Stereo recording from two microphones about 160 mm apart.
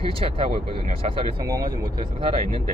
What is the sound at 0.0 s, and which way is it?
Speech, 35° right (ahead or behind).